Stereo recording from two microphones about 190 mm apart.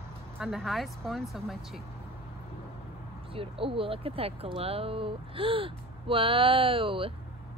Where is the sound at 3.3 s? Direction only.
30° right (ahead or behind).